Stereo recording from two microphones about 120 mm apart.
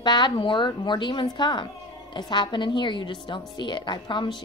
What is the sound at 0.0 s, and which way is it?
A woman's voice, 40° left (ahead or behind).